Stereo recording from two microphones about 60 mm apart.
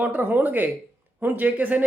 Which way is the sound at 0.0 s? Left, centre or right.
Right.